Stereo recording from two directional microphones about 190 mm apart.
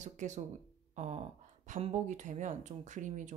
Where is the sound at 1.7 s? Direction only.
40° right (ahead or behind).